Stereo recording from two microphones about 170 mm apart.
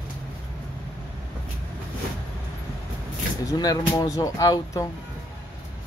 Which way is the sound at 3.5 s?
20° left (ahead or behind).